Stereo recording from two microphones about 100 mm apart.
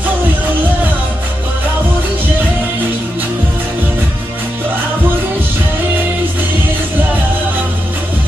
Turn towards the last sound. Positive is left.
turn(degrees=-20)  # may be behind; listen again after turning